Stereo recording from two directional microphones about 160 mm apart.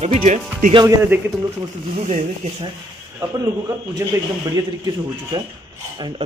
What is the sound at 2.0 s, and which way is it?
Speech, 50° right (ahead or behind).